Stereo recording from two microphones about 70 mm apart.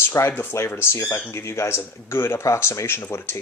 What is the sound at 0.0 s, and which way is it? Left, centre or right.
Speech, left.